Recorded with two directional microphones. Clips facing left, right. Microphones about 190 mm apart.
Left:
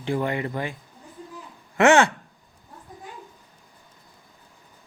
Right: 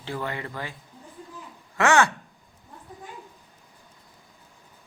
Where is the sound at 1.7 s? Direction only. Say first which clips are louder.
Left 4 dB; 20° left (ahead or behind).